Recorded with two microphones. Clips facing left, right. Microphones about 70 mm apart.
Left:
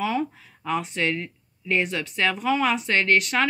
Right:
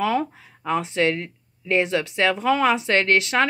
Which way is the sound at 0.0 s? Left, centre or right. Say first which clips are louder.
Right 3 dB; right.